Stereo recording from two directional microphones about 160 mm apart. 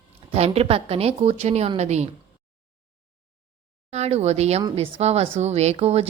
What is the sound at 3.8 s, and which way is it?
A woman's voice, 40° right (ahead or behind).